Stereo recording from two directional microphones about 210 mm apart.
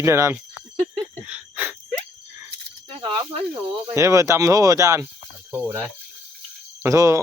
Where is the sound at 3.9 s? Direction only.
15° right (ahead or behind).